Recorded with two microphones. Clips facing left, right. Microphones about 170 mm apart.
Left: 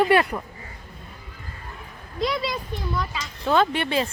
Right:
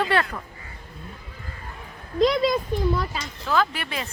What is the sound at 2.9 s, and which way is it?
Speech, 35° right (ahead or behind).